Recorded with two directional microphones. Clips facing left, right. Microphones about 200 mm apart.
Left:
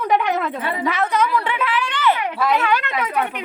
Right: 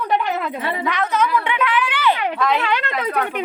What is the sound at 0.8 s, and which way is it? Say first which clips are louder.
Speech: left 1 dB; 10° left (ahead or behind).